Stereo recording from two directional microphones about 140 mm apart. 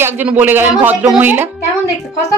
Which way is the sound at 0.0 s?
15° right (ahead or behind).